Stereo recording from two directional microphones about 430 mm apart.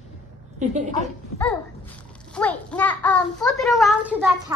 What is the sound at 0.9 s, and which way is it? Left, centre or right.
A child's voice, centre.